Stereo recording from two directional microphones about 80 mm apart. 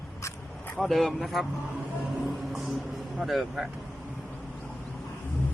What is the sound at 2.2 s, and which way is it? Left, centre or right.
Music, centre.